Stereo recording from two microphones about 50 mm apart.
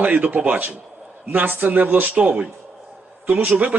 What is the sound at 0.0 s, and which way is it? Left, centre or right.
Speech, right.